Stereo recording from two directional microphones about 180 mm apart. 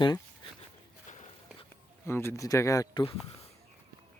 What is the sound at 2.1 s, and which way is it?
Speech, 15° left (ahead or behind).